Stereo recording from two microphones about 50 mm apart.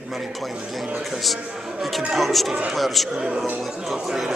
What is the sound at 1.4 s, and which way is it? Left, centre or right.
Speech, centre.